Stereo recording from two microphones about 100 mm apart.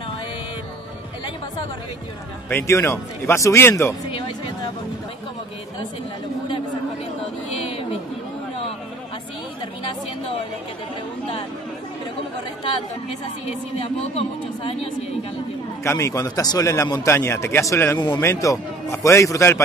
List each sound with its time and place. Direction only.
2.5 s a man's voice: 25° left (ahead or behind)
14.1 s speech: 75° left (ahead or behind)
15.8 s a man's voice: 30° left (ahead or behind)
17.9 s speech: 45° left (ahead or behind)
18.2 s a man's voice: 30° left (ahead or behind)